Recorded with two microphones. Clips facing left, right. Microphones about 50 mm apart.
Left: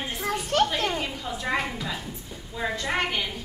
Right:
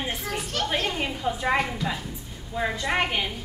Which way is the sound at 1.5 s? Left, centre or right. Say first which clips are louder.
Right 2 dB; centre.